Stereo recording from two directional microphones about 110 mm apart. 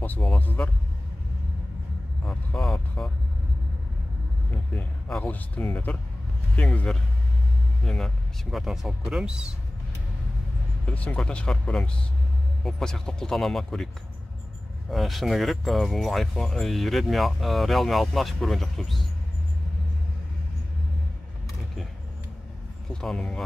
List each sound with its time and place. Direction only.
0.4 s speech: 15° left (ahead or behind)
2.2 s speech: 5° left (ahead or behind)
4.7 s speech: 10° left (ahead or behind); by 9.5 s 10° right (ahead or behind)
10.9 s speech: 10° left (ahead or behind)
14.9 s speech: centre (ahead or behind)
22.9 s speech: 5° left (ahead or behind)